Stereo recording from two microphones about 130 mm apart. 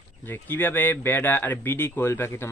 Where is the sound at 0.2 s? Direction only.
15° left (ahead or behind).